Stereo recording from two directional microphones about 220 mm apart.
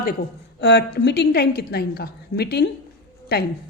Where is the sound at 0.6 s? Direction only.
50° left (ahead or behind).